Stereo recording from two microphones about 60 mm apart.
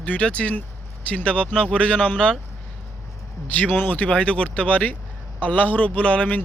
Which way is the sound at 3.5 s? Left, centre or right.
Left.